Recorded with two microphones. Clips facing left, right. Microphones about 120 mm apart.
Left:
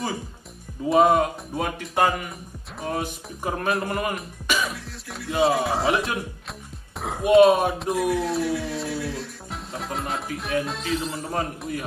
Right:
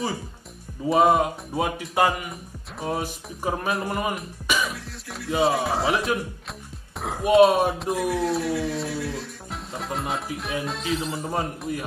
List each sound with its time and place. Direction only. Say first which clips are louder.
0.8 s speech: left 1 dB; centre (ahead or behind)